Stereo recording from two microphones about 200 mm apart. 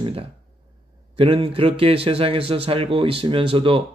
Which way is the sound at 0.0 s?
25° right (ahead or behind).